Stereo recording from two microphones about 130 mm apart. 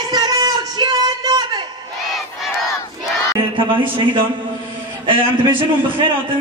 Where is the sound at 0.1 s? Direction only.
30° right (ahead or behind).